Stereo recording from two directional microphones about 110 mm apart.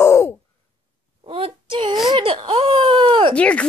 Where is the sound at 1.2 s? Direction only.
55° right (ahead or behind).